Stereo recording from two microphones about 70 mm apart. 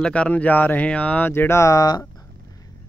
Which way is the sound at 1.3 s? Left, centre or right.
Left.